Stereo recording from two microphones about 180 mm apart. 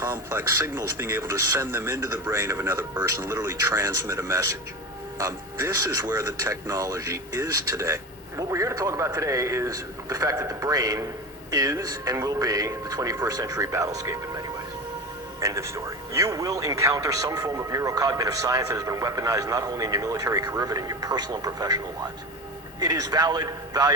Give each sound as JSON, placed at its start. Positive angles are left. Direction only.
{"t": 0.0, "sound": "speech", "side_deg": -15}